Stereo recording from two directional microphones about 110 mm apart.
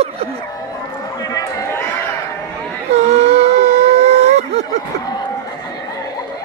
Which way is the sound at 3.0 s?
80° right.